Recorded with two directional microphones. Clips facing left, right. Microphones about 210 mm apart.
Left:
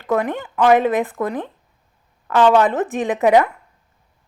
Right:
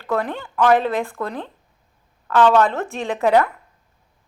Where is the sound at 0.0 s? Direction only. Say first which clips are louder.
Left 3 dB; 15° left (ahead or behind).